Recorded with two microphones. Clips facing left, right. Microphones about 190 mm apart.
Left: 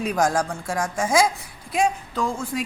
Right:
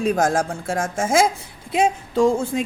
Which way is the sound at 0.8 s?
50° right (ahead or behind).